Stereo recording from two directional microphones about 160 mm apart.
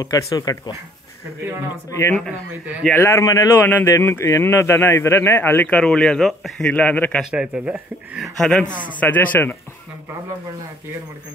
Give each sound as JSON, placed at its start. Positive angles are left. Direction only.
{"t": 0.0, "sound": "speech", "side_deg": 25}
{"t": 1.9, "sound": "speech", "side_deg": 20}
{"t": 7.2, "sound": "speech", "side_deg": -5}
{"t": 8.4, "sound": "speech", "side_deg": 5}